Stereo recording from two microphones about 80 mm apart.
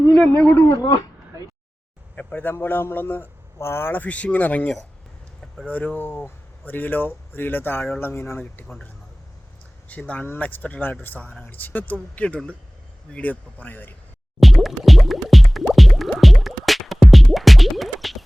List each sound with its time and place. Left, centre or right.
0.1 s a man's voice: centre
0.8 s speech: left
2.1 s speech: left
10.1 s speech: left
14.3 s music: centre